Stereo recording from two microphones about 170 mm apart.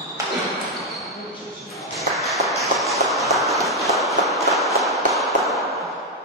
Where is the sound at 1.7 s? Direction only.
Centre (ahead or behind).